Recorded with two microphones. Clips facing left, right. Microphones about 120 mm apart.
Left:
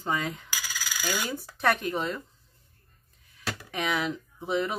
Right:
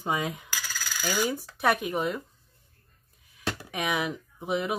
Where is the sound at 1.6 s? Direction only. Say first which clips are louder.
Right 1 dB; 10° right (ahead or behind).